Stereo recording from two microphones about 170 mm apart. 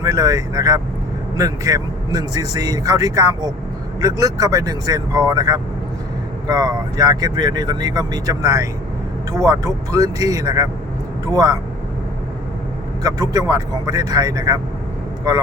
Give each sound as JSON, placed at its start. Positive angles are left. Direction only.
{"t": 0.0, "sound": "speech", "side_deg": -20}
{"t": 13.0, "sound": "speech", "side_deg": -20}